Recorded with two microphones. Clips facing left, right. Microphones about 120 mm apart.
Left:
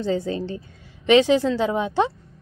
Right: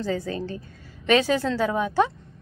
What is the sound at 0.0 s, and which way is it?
A woman's voice, 25° left (ahead or behind).